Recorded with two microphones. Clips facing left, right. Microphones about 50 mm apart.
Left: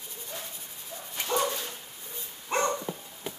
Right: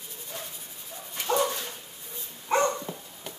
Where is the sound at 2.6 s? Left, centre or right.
Centre.